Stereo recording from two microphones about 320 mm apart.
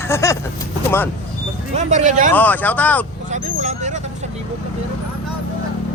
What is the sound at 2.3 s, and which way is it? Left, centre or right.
Speech, centre.